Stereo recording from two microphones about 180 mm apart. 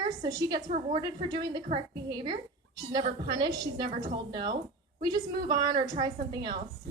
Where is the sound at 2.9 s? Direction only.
20° right (ahead or behind).